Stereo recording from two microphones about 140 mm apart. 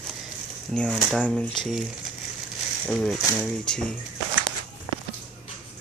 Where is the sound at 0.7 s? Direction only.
5° left (ahead or behind).